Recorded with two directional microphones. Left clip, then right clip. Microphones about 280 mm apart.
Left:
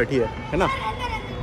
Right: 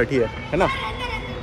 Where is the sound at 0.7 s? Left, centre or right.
Left.